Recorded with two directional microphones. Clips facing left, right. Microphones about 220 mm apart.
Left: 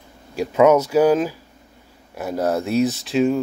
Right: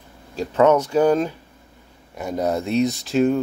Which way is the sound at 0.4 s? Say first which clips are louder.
Left 2 dB; 10° left (ahead or behind).